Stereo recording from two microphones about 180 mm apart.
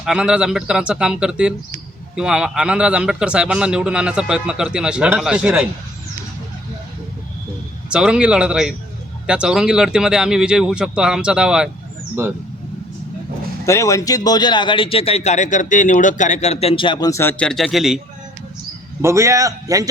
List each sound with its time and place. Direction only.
0.0 s a man's voice: 5° right (ahead or behind)
7.9 s a man's voice: 5° right (ahead or behind)
13.7 s a man's voice: 15° left (ahead or behind); by 18.0 s centre (ahead or behind)
19.0 s a man's voice: 15° right (ahead or behind)